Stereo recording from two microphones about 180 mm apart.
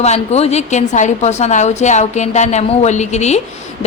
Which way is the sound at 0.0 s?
35° left (ahead or behind).